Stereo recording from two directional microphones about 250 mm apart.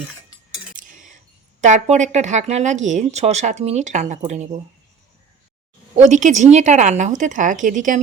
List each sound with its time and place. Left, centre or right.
0.8 s a sound: right
1.6 s a woman's voice: right
6.0 s a woman's voice: right